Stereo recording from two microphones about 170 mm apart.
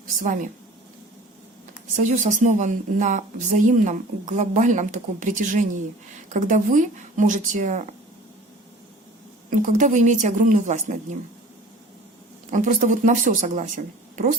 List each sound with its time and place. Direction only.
1.9 s speech: 45° right (ahead or behind)
9.6 s speech: 50° right (ahead or behind)
12.5 s speech: 50° right (ahead or behind)